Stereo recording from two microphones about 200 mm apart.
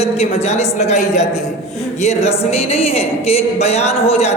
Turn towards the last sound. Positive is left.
turn(degrees=30)  # may be behind; listen again after turning